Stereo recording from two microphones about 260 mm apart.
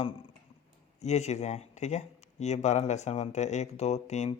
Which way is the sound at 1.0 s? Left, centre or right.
Left.